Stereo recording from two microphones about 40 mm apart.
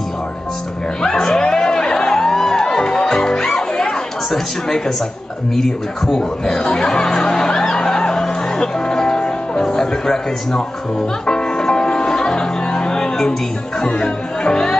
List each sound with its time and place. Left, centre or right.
1.0 s music: centre
9.6 s speech: centre
11.2 s music: centre
13.7 s speech: centre